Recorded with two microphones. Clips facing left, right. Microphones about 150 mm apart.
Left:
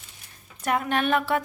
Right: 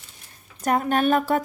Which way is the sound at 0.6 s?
40° right (ahead or behind).